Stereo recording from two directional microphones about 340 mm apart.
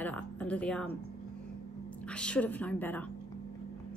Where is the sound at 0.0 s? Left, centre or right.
Centre.